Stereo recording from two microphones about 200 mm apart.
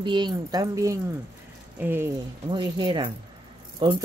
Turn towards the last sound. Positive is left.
turn(degrees=-25)  # may be behind; listen again after turning